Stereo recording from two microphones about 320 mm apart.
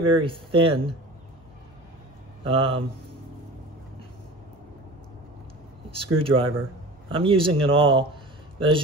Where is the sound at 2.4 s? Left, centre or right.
Centre.